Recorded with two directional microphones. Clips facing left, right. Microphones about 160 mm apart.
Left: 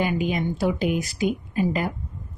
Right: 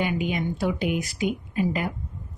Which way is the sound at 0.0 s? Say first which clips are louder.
Left 2 dB; 35° left (ahead or behind).